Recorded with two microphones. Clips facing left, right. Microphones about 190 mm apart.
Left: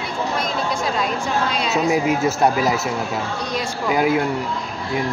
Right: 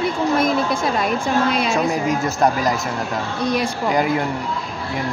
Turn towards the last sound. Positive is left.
turn(degrees=5)  # may be behind; listen again after turning